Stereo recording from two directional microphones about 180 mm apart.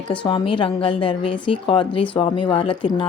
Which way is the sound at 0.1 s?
25° left (ahead or behind).